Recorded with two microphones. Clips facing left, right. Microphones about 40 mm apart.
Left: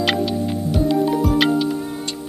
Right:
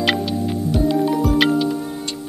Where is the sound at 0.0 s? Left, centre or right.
Centre.